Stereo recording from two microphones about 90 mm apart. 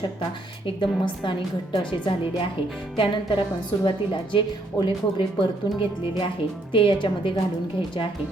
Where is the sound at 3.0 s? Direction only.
70° left (ahead or behind).